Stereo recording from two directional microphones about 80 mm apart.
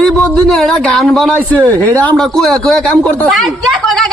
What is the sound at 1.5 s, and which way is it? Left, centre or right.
Speech, centre.